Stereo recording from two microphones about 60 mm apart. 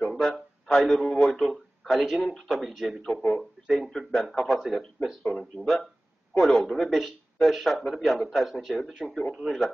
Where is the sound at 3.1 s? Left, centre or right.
Left.